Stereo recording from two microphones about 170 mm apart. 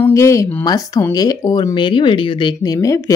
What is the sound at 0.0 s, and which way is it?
Speech, 15° left (ahead or behind).